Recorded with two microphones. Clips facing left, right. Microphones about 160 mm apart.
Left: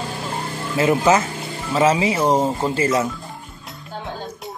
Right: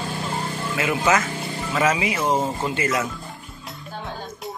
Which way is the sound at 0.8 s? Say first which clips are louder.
Left 5 dB; 35° left (ahead or behind).